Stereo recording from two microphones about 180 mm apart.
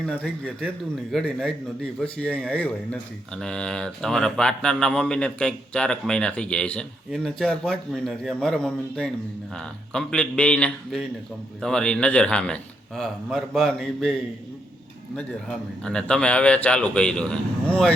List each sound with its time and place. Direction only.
0.0 s speech: 5° left (ahead or behind)